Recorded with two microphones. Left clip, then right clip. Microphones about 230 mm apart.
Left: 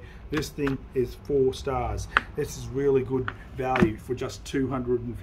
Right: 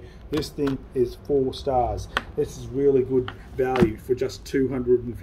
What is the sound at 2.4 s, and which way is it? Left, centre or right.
Speech, centre.